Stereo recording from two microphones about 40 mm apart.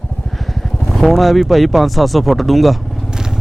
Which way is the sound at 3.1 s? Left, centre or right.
Centre.